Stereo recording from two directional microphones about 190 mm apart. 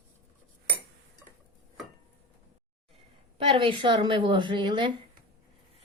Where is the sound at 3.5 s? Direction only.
25° right (ahead or behind).